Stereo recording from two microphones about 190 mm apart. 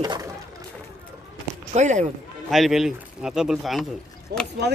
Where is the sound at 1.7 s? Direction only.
40° right (ahead or behind).